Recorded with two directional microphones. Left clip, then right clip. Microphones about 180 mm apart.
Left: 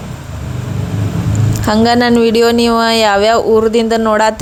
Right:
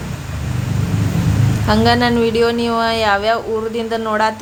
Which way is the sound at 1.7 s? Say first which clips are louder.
Left 4 dB; 45° left (ahead or behind).